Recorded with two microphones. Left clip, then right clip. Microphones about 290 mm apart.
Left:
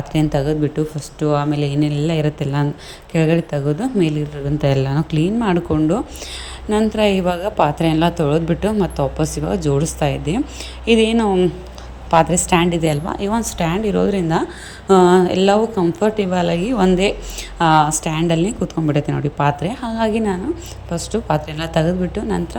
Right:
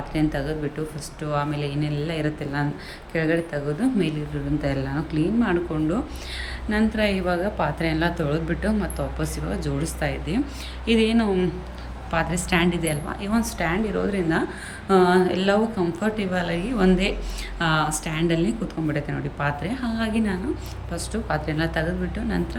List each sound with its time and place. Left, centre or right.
0.1 s speech: left